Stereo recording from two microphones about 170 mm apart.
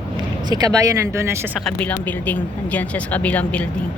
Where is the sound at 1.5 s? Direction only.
5° left (ahead or behind).